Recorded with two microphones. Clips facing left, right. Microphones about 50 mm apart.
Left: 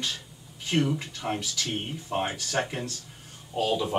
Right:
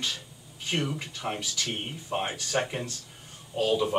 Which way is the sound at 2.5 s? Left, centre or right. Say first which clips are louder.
Right 3 dB; centre.